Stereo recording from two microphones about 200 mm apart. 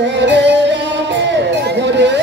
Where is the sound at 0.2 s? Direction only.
60° right (ahead or behind).